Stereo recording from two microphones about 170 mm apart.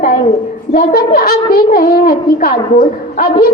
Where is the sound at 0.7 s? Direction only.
60° left (ahead or behind).